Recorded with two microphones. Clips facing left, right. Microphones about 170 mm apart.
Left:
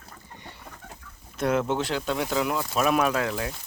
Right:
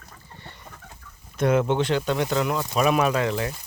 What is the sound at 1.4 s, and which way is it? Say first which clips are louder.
Speech: right 4 dB; centre (ahead or behind).